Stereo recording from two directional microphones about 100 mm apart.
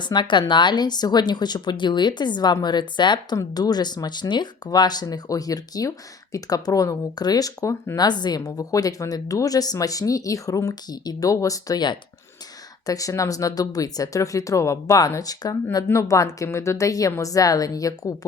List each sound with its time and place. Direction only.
0.0 s speech: 50° left (ahead or behind); by 8.0 s 30° left (ahead or behind)
8.0 s speech: 45° left (ahead or behind)